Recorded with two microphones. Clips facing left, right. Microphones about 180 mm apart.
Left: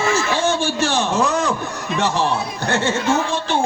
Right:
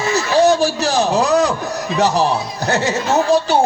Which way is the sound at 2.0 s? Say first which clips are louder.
Right 4 dB; 40° right (ahead or behind).